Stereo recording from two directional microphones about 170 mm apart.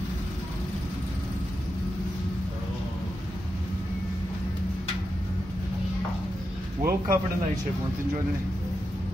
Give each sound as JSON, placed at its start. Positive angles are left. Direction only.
{"t": 6.8, "sound": "speech", "side_deg": -15}